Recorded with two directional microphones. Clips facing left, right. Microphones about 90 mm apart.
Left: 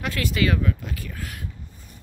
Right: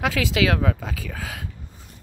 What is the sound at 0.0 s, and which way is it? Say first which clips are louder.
Speech: right 3 dB; 90° right.